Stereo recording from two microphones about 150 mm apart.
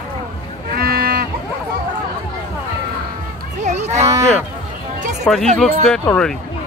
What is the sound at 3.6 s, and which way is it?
Cattle, 50° right (ahead or behind).